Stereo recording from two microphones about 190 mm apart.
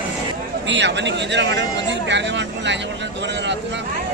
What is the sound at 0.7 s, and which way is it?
Speech, 65° right (ahead or behind).